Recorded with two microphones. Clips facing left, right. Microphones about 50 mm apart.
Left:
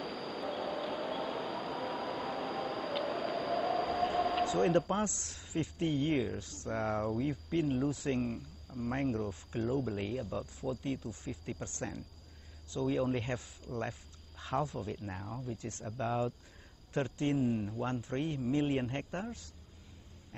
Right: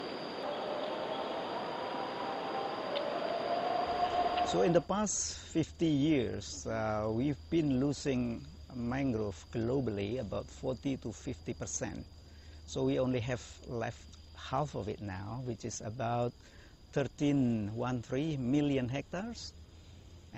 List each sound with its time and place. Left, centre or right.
0.0 s train: centre
4.6 s speech: centre
6.4 s speech: left
6.7 s speech: centre
7.9 s speech: centre
8.2 s speech: centre
15.5 s speech: centre
15.8 s speech: centre
17.5 s speech: centre
18.0 s speech: centre
19.0 s speech: centre